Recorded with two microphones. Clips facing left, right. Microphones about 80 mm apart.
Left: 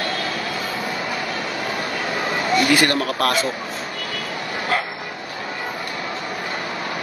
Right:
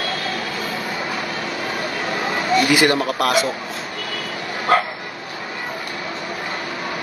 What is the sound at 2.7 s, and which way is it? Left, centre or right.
Speech, centre.